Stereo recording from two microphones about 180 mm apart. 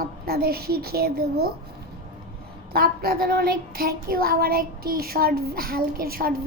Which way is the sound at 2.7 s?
55° right (ahead or behind).